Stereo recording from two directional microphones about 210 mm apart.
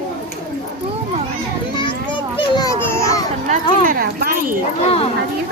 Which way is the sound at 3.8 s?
45° right (ahead or behind).